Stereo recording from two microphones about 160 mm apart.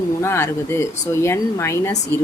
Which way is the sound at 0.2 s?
15° left (ahead or behind).